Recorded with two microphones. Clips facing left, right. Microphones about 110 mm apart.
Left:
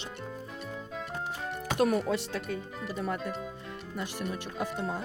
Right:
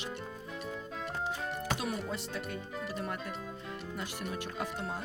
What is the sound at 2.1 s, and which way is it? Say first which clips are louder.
Speech: left 7 dB; 90° left.